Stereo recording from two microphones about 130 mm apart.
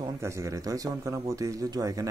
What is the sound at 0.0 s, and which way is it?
A man's voice, 25° right (ahead or behind).